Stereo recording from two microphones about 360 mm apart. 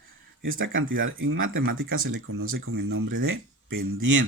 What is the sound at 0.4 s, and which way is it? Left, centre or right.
Speech, right.